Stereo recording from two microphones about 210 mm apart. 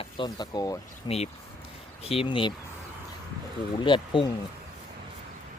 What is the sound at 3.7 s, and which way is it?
Speech, 25° left (ahead or behind).